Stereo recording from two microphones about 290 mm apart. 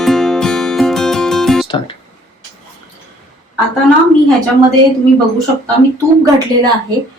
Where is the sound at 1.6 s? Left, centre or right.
Centre.